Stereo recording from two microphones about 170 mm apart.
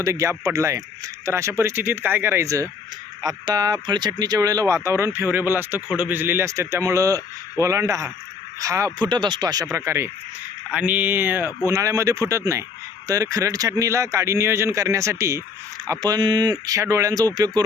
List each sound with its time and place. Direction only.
0.0 s speech: 20° right (ahead or behind)